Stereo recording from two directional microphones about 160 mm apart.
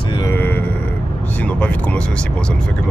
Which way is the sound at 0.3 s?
10° left (ahead or behind).